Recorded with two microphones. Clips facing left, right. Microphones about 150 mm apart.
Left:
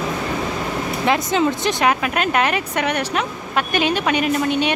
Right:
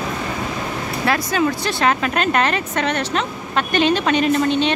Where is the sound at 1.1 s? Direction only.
20° left (ahead or behind).